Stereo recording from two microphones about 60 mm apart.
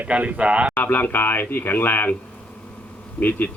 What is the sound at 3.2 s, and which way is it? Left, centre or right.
Speech, left.